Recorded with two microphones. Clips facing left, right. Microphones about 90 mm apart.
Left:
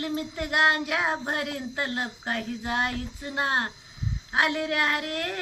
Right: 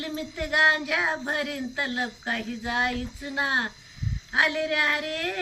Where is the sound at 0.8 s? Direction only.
30° left (ahead or behind).